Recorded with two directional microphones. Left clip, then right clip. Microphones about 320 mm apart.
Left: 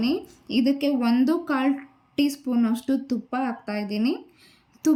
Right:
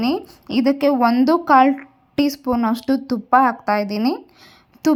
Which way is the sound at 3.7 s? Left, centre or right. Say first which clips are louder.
Right 7 dB; centre.